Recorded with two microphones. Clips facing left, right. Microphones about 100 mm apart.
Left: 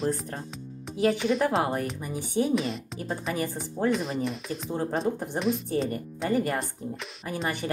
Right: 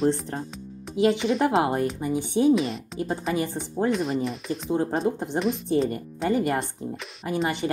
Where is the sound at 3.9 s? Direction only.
Centre (ahead or behind).